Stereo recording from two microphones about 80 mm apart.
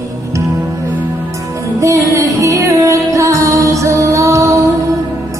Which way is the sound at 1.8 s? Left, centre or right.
Right.